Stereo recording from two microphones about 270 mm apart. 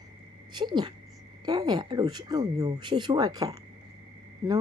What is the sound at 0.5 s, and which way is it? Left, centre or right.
Speech, centre.